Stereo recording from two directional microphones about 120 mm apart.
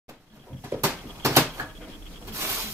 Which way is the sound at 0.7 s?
20° right (ahead or behind).